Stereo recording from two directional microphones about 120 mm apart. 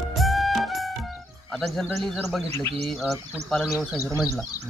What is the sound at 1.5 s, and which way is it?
Speech, centre (ahead or behind).